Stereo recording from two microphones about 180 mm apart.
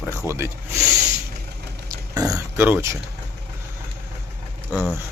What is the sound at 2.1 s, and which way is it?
Speech, 20° right (ahead or behind).